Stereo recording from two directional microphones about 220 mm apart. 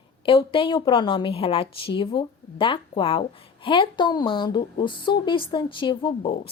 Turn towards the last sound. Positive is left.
turn(degrees=20)  # may be behind; listen again after turning